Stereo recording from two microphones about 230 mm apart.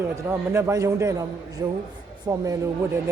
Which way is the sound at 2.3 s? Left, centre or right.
Centre.